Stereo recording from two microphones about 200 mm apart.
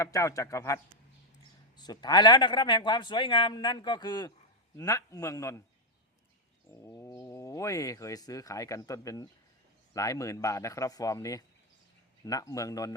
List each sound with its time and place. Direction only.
0.0 s a man's voice: 15° left (ahead or behind)
6.8 s speech: 15° left (ahead or behind)